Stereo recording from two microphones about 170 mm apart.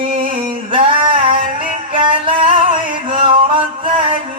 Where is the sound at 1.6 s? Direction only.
30° right (ahead or behind).